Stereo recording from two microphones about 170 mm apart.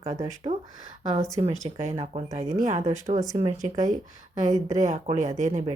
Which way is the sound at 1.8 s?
40° right (ahead or behind).